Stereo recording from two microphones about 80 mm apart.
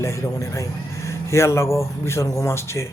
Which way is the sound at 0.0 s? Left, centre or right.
Left.